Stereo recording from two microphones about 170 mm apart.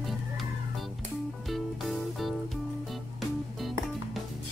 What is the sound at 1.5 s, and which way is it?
Music, centre (ahead or behind).